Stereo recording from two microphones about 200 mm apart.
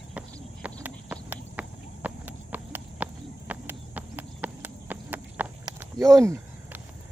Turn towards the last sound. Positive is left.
turn(degrees=-15)  # may be behind; listen again after turning